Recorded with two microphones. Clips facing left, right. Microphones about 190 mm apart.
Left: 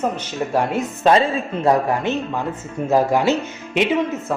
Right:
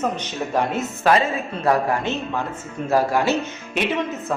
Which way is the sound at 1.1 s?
25° left (ahead or behind).